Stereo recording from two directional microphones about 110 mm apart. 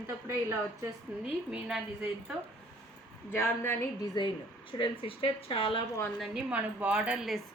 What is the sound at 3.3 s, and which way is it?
Speech, 20° left (ahead or behind).